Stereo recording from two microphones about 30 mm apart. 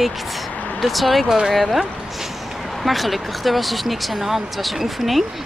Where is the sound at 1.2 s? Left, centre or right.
Centre.